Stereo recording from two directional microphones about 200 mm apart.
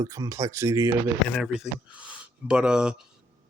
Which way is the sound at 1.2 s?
Centre (ahead or behind).